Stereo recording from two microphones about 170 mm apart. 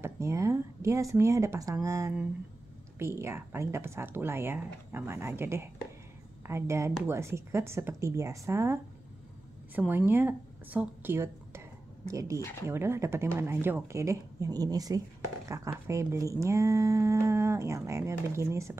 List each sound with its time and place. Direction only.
0.0 s a woman's voice: 15° right (ahead or behind)
9.8 s speech: 10° right (ahead or behind)
12.4 s speech: 15° left (ahead or behind)
12.6 s speech: 15° right (ahead or behind)